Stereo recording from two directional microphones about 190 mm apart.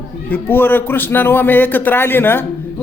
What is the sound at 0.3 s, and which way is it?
A man's voice, 10° left (ahead or behind).